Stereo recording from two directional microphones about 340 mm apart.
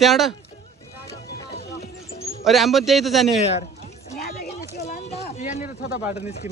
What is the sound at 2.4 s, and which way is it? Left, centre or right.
Speech, centre.